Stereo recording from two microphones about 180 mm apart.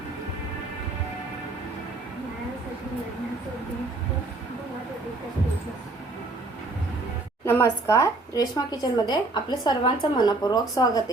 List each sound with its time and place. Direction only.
7.4 s speech: 15° left (ahead or behind)